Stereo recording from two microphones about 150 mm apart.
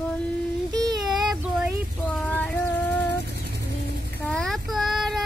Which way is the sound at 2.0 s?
10° left (ahead or behind).